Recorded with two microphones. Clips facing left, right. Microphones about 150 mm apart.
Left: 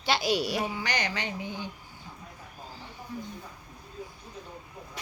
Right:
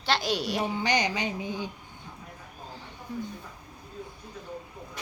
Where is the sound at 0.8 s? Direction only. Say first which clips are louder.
Right 5 dB; 20° right (ahead or behind).